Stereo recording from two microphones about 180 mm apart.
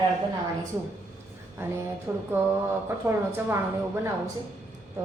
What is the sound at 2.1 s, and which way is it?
A woman's voice, 15° right (ahead or behind).